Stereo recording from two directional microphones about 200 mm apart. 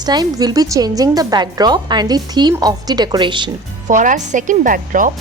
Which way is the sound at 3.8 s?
40° right (ahead or behind).